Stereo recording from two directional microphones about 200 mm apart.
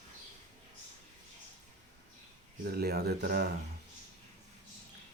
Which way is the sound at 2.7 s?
50° right (ahead or behind).